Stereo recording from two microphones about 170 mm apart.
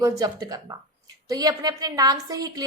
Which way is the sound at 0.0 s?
20° right (ahead or behind).